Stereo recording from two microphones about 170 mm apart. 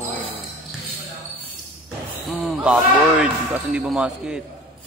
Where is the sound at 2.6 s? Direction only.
5° right (ahead or behind).